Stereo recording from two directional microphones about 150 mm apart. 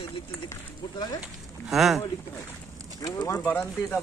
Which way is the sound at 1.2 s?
Centre (ahead or behind).